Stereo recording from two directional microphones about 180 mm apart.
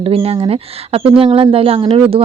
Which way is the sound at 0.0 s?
30° right (ahead or behind).